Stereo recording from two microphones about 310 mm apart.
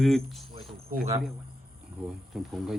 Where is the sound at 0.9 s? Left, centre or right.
Right.